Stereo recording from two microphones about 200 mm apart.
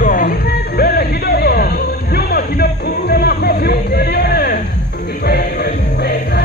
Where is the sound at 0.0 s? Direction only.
40° left (ahead or behind).